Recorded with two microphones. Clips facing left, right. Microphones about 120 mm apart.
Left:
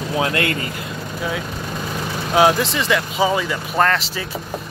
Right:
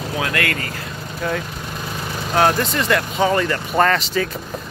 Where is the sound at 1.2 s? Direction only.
5° left (ahead or behind).